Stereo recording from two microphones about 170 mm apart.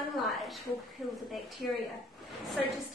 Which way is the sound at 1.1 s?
Centre (ahead or behind).